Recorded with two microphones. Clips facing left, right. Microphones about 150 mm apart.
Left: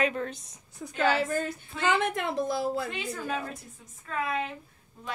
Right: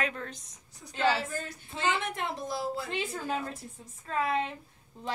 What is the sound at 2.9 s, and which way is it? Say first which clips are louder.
A woman's voice: even; 30° right (ahead or behind).